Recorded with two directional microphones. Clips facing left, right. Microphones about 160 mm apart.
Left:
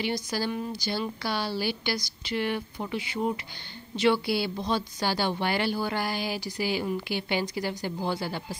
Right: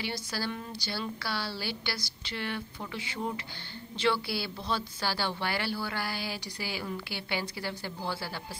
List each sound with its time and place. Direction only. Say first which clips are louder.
0.0 s a woman's voice: left 6 dB; 15° left (ahead or behind)